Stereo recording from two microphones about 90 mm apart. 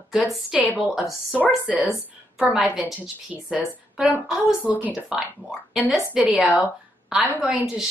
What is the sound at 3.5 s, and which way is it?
A woman's voice, 15° right (ahead or behind).